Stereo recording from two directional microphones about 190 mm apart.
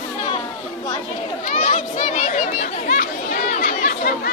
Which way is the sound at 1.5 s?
40° left (ahead or behind).